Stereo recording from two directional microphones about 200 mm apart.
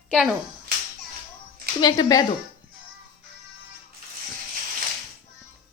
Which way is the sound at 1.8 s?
20° left (ahead or behind).